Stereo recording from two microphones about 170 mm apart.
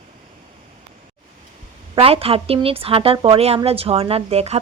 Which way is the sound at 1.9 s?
35° right (ahead or behind).